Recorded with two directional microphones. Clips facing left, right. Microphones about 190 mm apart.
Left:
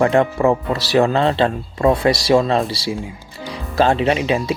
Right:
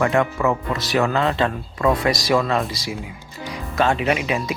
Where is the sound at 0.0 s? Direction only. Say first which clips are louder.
Left 4 dB; 30° left (ahead or behind).